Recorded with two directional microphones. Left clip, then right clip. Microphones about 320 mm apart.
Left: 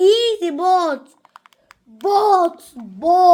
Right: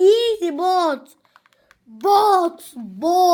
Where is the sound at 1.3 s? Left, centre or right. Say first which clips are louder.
Left 7 dB; left.